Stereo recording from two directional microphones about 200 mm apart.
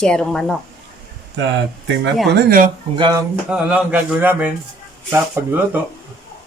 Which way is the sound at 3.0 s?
20° right (ahead or behind).